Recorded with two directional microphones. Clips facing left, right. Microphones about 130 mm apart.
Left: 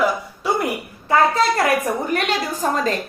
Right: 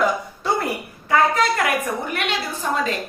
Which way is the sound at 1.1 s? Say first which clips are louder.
Left 2 dB; 35° left (ahead or behind).